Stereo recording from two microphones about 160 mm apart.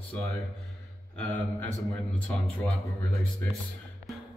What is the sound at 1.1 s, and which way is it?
A man's voice, 10° left (ahead or behind).